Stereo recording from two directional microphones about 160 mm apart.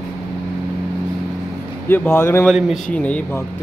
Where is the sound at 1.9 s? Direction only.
15° left (ahead or behind).